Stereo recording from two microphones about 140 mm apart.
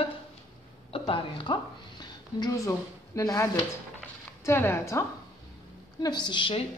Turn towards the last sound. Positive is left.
turn(degrees=40)  # may be behind; listen again after turning